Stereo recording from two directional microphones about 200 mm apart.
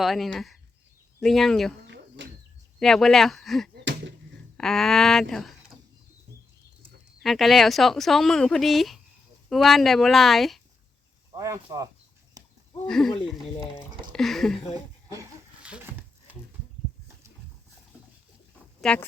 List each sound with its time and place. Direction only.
0.0 s speech: centre (ahead or behind)
1.9 s a sound: 60° right (ahead or behind)
2.7 s speech: centre (ahead or behind)
7.2 s speech: centre (ahead or behind)
11.3 s speech: 15° right (ahead or behind)
12.9 s speech: centre (ahead or behind)
15.1 s a sound: 15° right (ahead or behind)
18.8 s speech: 5° left (ahead or behind)